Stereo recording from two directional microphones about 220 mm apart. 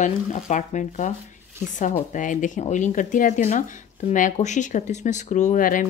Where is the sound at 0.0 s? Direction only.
35° left (ahead or behind).